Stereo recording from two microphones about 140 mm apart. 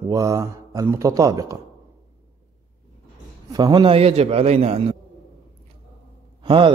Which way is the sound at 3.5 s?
30° right (ahead or behind).